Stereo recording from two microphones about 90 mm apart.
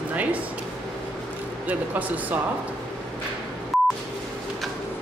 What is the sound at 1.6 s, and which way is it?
Speech, 20° right (ahead or behind).